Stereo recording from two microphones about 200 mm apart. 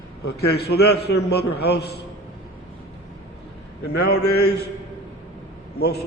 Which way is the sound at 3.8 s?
55° left (ahead or behind).